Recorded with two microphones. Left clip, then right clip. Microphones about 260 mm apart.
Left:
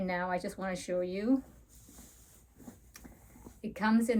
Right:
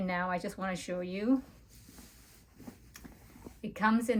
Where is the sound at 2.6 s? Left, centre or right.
Right.